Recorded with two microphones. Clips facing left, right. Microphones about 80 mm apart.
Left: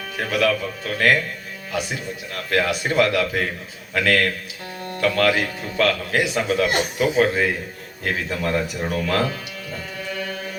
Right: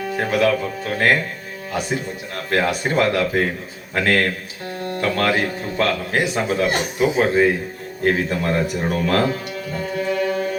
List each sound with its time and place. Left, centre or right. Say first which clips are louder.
0.2 s speech: right 2 dB; right
8.0 s speech: right 5 dB; right
10.0 s music: right 9 dB; right